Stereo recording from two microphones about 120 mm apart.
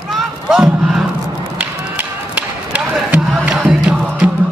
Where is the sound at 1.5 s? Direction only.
15° right (ahead or behind).